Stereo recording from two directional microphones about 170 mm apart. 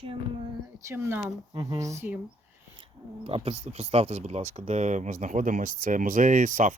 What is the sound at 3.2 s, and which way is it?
Speech, 35° right (ahead or behind).